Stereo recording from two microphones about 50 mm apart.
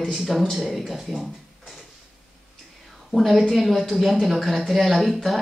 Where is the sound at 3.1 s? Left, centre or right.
Centre.